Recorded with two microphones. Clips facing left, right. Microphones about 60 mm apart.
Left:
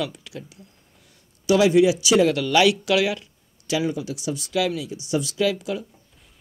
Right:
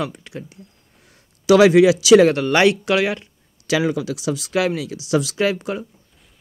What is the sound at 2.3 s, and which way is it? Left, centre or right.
Speech, right.